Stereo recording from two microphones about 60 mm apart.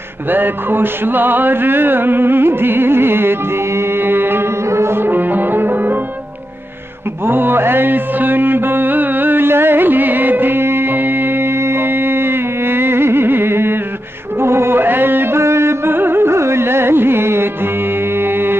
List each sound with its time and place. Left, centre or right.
0.3 s music: right
4.6 s music: right
7.2 s mantra: right
14.4 s music: right